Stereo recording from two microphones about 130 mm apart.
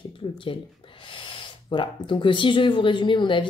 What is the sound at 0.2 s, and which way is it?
Speech, 35° left (ahead or behind).